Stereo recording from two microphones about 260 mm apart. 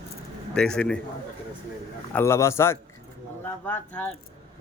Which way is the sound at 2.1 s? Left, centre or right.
Centre.